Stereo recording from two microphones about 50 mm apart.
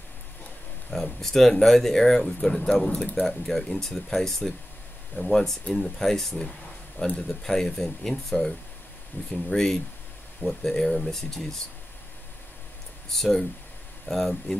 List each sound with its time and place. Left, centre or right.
0.8 s speech: centre
2.9 s speech: left
3.3 s speech: centre
13.1 s speech: centre